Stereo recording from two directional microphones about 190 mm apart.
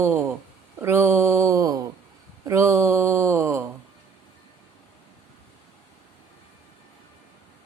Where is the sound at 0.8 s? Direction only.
15° right (ahead or behind).